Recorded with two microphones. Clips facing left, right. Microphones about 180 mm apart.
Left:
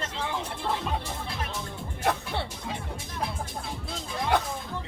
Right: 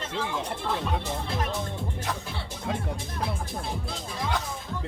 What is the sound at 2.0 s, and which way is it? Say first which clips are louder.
Music: left 5 dB; 60° left (ahead or behind).